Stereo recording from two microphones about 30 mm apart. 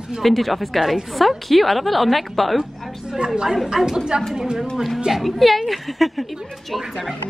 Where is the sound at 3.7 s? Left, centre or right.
Centre.